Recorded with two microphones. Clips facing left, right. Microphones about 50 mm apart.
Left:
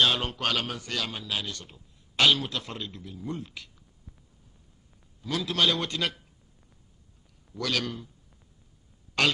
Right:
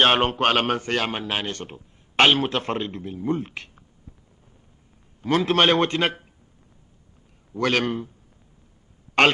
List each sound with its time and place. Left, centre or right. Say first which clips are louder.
0.0 s speech: right 7 dB; right
5.2 s speech: right 8 dB; right
7.5 s a man's voice: right 8 dB; right